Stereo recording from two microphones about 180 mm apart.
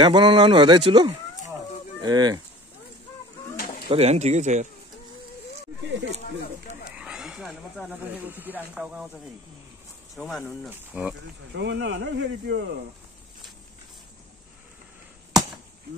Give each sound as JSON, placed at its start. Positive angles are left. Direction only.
{"t": 0.0, "sound": "speech", "side_deg": -25}
{"t": 3.5, "sound": "bird", "side_deg": 55}
{"t": 3.9, "sound": "speech", "side_deg": -35}
{"t": 7.0, "sound": "a sound", "side_deg": -5}
{"t": 8.3, "sound": "speech", "side_deg": -10}
{"t": 10.1, "sound": "speech", "side_deg": 5}
{"t": 10.7, "sound": "speech", "side_deg": -10}
{"t": 11.5, "sound": "speech", "side_deg": -70}